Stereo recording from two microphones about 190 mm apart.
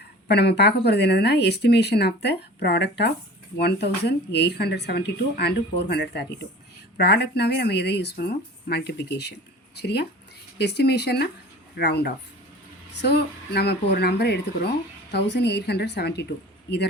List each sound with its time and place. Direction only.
0.3 s speech: 60° left (ahead or behind)